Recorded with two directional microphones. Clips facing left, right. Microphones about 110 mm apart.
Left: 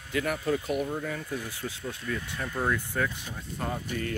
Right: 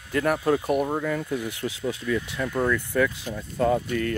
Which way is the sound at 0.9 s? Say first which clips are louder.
Right 6 dB; 80° right.